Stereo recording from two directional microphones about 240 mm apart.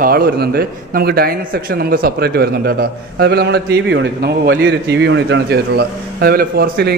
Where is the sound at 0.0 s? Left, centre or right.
Right.